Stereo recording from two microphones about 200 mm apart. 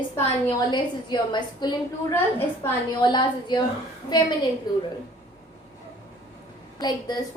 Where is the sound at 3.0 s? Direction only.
25° left (ahead or behind).